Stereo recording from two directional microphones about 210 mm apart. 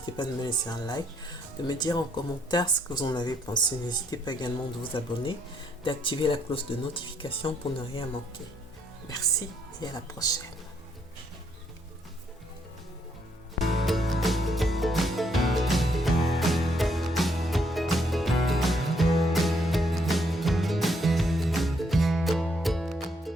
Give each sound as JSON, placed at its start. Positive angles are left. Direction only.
{"t": 0.0, "sound": "speech", "side_deg": 20}
{"t": 9.8, "sound": "speech", "side_deg": 20}
{"t": 13.6, "sound": "music", "side_deg": 0}